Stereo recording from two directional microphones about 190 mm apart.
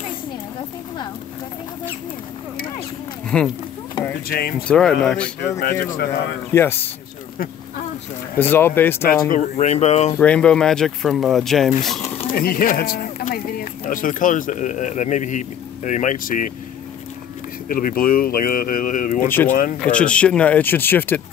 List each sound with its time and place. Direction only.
3.3 s speech: 5° left (ahead or behind)
4.3 s speech: 55° left (ahead or behind)
4.6 s speech: 5° left (ahead or behind)
5.6 s speech: 50° left (ahead or behind)
6.5 s speech: 10° left (ahead or behind)
8.4 s speech: 10° left (ahead or behind)
9.3 s speech: 40° left (ahead or behind)
10.1 s speech: 5° left (ahead or behind)
12.3 s speech: 50° left (ahead or behind)
17.6 s speech: 45° left (ahead or behind)
19.2 s speech: 10° left (ahead or behind)
19.5 s speech: 45° left (ahead or behind)
19.8 s speech: 5° left (ahead or behind)